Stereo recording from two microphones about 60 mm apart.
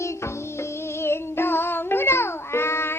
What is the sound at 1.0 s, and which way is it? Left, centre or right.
Music, left.